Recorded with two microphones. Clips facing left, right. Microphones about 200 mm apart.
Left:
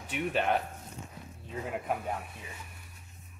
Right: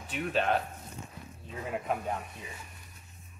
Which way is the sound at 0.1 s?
15° left (ahead or behind).